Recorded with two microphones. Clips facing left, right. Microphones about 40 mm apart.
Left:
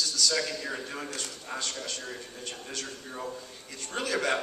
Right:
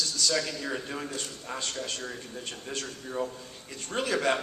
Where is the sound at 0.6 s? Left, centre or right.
Centre.